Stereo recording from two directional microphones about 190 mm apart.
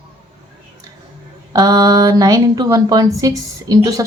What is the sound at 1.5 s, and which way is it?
A woman's voice, 20° right (ahead or behind).